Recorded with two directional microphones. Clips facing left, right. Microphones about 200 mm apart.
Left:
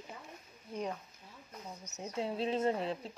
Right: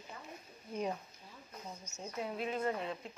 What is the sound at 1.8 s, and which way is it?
Speech, 20° left (ahead or behind).